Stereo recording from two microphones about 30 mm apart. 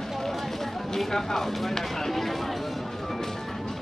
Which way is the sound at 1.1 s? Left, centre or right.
Centre.